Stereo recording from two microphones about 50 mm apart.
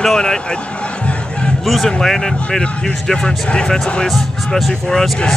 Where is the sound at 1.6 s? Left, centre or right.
Centre.